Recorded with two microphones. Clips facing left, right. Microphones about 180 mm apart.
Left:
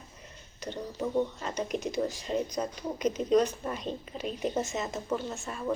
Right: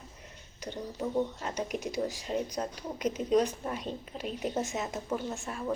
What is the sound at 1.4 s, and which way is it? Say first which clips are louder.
Speech: left 2 dB; 10° right (ahead or behind).